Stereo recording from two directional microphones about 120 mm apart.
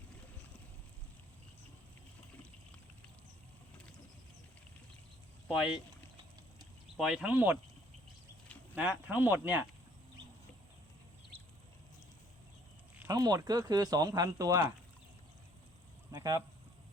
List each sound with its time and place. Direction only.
5.5 s speech: 5° right (ahead or behind)
6.9 s speech: 5° right (ahead or behind)
8.7 s speech: 10° right (ahead or behind)
13.1 s speech: 30° right (ahead or behind)
16.1 s speech: 30° right (ahead or behind)